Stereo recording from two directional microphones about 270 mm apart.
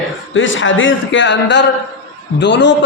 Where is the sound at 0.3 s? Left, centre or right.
Left.